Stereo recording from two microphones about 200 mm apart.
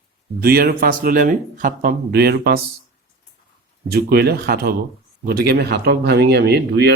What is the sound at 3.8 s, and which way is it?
Speech, 55° right (ahead or behind).